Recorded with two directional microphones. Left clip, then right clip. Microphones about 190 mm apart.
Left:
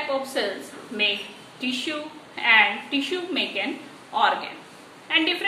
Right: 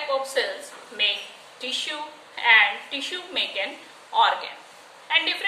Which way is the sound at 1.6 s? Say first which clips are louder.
Even; 10° right (ahead or behind).